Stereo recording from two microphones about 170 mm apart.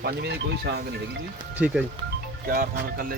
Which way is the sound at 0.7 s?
80° right.